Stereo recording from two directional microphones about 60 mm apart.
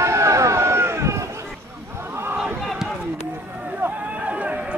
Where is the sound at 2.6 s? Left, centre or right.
Centre.